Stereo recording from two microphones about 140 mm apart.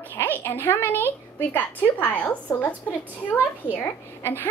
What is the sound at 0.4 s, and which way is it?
A woman's voice, 15° left (ahead or behind).